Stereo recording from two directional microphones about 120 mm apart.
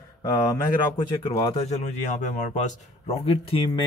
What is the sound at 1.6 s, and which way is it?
A man's voice, 65° left (ahead or behind).